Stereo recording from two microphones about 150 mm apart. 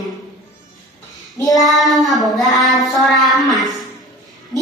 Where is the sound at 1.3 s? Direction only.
25° left (ahead or behind).